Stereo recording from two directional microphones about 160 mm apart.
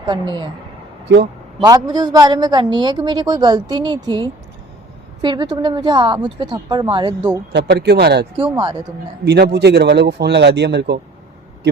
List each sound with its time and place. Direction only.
0.0 s a woman's voice: 30° right (ahead or behind)
1.0 s a man's voice: 90° right
1.6 s a woman's voice: 25° right (ahead or behind)
5.2 s a woman's voice: 25° right (ahead or behind)
7.5 s a man's voice: 90° right
8.4 s a woman's voice: 30° right (ahead or behind)
9.2 s a man's voice: 90° right